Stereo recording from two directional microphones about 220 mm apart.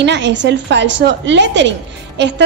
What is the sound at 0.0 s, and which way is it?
A woman's voice, 55° right (ahead or behind).